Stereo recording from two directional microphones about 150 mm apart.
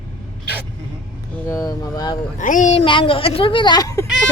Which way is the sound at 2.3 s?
55° left (ahead or behind).